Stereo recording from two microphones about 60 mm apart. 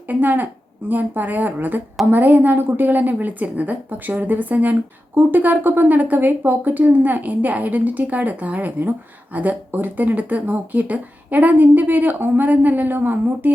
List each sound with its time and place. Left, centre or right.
0.1 s a woman's voice: right